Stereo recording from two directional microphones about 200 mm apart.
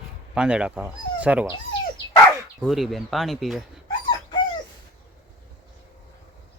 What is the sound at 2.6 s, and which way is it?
Speech, centre (ahead or behind).